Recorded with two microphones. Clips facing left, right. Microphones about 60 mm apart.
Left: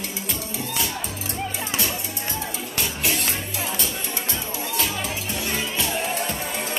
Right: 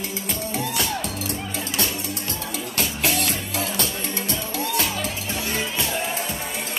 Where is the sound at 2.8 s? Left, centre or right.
Right.